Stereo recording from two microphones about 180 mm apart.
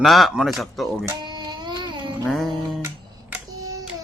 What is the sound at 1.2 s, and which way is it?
Music, 25° right (ahead or behind).